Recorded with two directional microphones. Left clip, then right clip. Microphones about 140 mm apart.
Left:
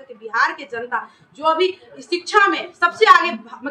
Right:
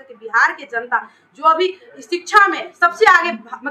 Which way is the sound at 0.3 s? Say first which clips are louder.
Right 4 dB; 10° left (ahead or behind).